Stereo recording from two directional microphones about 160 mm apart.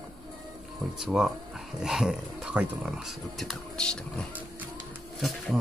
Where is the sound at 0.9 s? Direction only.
5° right (ahead or behind).